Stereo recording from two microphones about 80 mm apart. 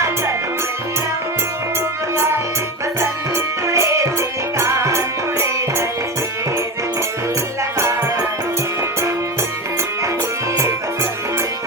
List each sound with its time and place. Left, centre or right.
3.0 s music: right